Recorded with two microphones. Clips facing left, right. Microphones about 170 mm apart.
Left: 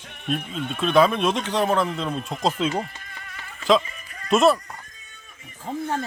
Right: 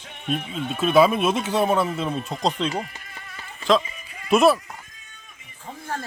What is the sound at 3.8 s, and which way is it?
Music, 10° right (ahead or behind).